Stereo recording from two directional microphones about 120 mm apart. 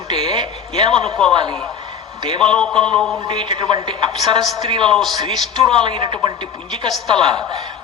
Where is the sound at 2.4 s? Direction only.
5° left (ahead or behind).